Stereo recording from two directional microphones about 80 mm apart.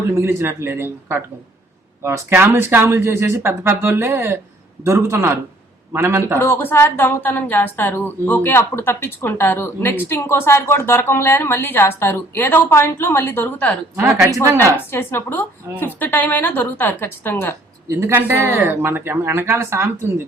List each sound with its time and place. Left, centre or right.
0.1 s speech: right
6.4 s a woman's voice: left
14.4 s speech: right
14.8 s a woman's voice: left
18.1 s speech: right